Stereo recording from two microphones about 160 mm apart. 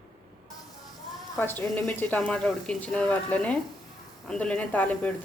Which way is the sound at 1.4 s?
10° left (ahead or behind).